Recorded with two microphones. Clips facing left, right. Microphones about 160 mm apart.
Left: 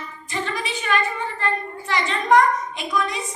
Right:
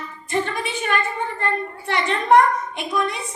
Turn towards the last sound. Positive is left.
turn(degrees=-60)  # may be behind; listen again after turning